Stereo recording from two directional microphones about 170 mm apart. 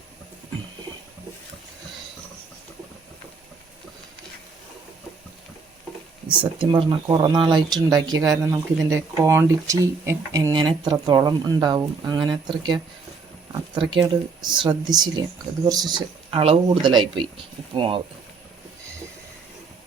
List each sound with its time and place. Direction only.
6.6 s speech: 25° right (ahead or behind)
13.5 s a sound: 25° right (ahead or behind)
14.4 s speech: 25° right (ahead or behind)